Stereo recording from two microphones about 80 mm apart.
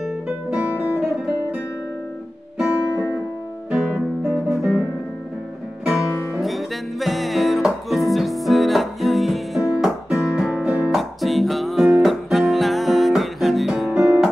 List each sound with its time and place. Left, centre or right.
0.0 s music: centre
2.7 s music: left
3.7 s music: centre
6.0 s music: left
6.4 s music: centre